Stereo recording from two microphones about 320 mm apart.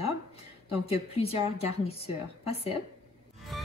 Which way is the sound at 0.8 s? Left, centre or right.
Centre.